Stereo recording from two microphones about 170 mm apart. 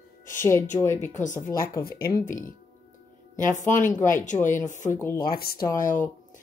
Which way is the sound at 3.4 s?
50° left (ahead or behind).